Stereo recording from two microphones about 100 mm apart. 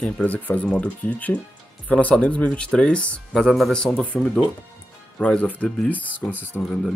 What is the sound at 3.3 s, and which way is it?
Speech, centre (ahead or behind).